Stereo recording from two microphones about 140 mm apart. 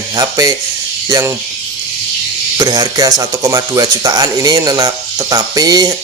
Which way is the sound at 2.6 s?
25° right (ahead or behind).